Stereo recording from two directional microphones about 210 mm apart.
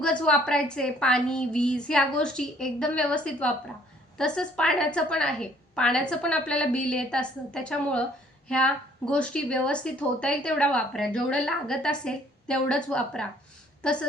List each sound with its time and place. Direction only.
0.0 s a woman's voice: 5° left (ahead or behind)